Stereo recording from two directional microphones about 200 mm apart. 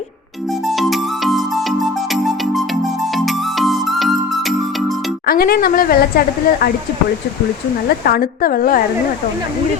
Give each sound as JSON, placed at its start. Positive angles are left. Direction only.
{"t": 0.5, "sound": "music", "side_deg": 0}
{"t": 5.2, "sound": "speech", "side_deg": 50}
{"t": 7.9, "sound": "speech", "side_deg": 45}